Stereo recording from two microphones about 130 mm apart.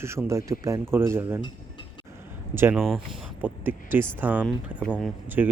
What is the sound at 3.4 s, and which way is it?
Speech, 15° right (ahead or behind).